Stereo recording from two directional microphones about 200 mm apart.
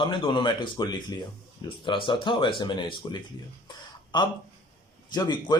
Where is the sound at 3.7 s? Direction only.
20° left (ahead or behind).